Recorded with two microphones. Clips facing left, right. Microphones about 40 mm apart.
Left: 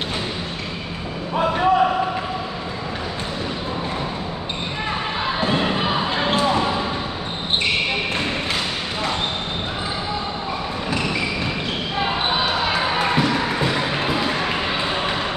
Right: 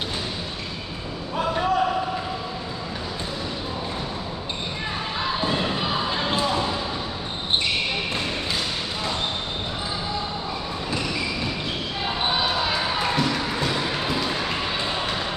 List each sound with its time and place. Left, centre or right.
1.4 s a sound: left
5.5 s basketball bounce: left
12.0 s basketball bounce: left